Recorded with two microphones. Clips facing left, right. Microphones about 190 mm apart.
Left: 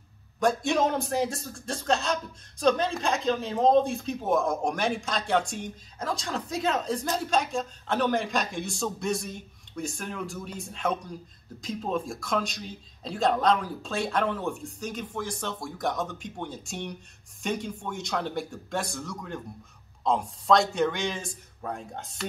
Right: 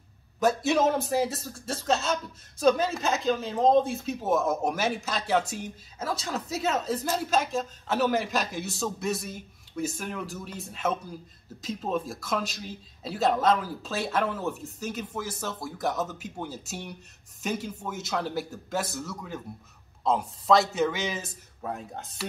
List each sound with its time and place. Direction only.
0.4 s speech: 5° right (ahead or behind)